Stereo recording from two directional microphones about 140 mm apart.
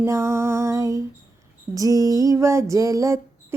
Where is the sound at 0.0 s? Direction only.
20° right (ahead or behind).